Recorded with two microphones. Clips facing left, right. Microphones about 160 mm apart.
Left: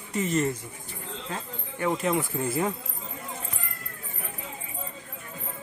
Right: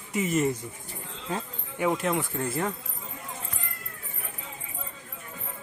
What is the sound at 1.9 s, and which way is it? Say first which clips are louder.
Speech: left 4 dB; centre (ahead or behind).